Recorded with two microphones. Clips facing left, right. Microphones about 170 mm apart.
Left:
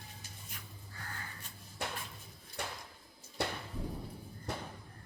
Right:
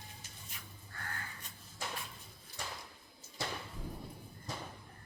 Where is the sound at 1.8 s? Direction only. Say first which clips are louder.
Left 3 dB; 65° left (ahead or behind).